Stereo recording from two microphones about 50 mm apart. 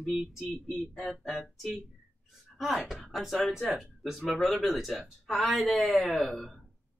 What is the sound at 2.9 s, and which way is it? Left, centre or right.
Speech, centre.